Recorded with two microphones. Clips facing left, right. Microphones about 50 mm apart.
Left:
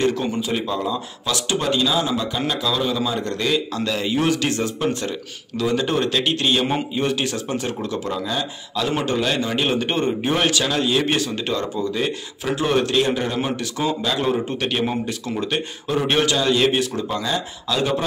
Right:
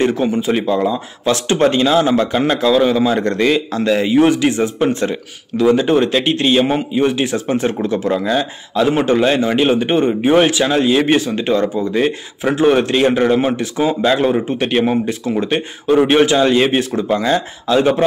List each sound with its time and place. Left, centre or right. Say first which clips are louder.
0.0 s a man's voice: right 6 dB; right
14.0 s a man's voice: right 7 dB; right